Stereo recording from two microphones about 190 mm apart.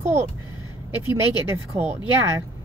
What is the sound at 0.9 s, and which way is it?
Speech, 15° right (ahead or behind).